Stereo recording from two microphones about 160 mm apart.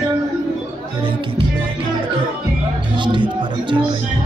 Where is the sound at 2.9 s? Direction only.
30° right (ahead or behind).